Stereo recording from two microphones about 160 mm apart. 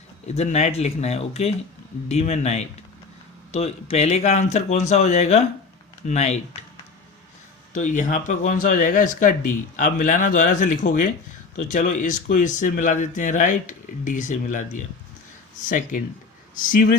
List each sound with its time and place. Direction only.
0.3 s speech: 45° left (ahead or behind)
7.7 s speech: 50° left (ahead or behind)